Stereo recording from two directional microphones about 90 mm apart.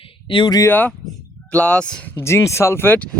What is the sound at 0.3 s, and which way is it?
Speech, 70° left (ahead or behind).